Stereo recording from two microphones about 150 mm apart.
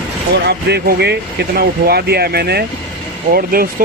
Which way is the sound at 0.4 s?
90° right.